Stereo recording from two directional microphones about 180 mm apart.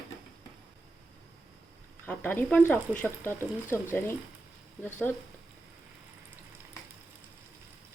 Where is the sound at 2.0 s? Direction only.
10° left (ahead or behind).